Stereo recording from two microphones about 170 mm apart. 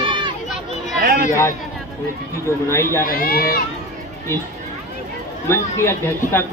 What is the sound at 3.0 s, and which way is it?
Speech, 60° left (ahead or behind).